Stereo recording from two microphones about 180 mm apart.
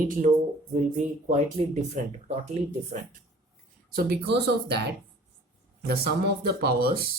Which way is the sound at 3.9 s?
65° right (ahead or behind).